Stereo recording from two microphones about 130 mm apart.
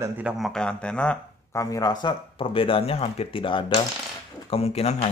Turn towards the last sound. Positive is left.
turn(degrees=55)  # may be behind; listen again after turning